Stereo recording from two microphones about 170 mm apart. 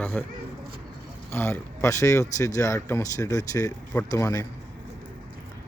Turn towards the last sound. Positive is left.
turn(degrees=15)  # may be behind; listen again after turning